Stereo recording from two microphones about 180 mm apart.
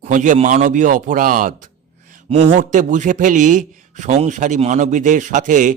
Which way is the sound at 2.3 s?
30° right (ahead or behind).